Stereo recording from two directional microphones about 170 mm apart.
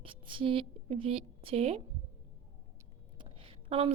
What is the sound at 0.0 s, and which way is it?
A woman's voice, 30° right (ahead or behind).